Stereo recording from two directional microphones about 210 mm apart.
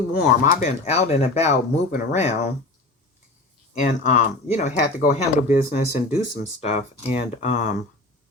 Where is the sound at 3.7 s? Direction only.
35° left (ahead or behind).